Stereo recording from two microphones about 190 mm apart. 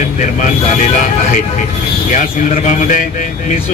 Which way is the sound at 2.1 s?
45° left (ahead or behind).